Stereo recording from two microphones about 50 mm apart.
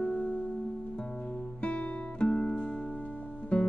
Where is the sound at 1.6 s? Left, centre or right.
Left.